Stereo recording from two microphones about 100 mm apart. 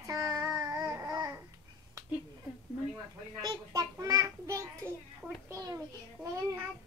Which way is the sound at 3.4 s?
35° right (ahead or behind).